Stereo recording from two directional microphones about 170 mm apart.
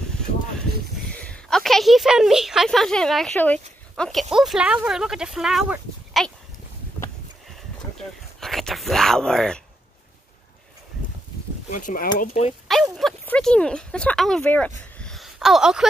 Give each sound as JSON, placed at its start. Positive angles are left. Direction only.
{"t": 1.1, "sound": "a woman's voice", "side_deg": 5}
{"t": 8.4, "sound": "speech", "side_deg": 0}
{"t": 11.7, "sound": "speech", "side_deg": 50}
{"t": 12.9, "sound": "a woman's voice", "side_deg": 5}
{"t": 15.0, "sound": "a sound", "side_deg": 0}